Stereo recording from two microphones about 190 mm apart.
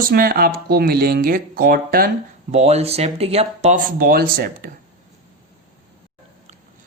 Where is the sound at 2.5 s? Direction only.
35° right (ahead or behind).